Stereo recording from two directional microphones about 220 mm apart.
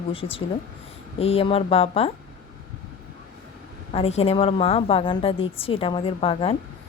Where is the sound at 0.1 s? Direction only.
25° left (ahead or behind).